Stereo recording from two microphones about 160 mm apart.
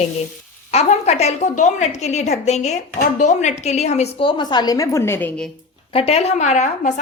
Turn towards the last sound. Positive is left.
turn(degrees=45)  # may be behind; listen again after turning